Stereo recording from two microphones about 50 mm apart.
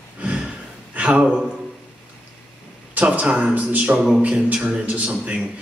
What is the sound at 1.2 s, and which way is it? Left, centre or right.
Speech, centre.